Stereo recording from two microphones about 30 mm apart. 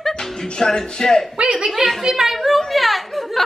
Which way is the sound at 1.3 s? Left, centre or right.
Right.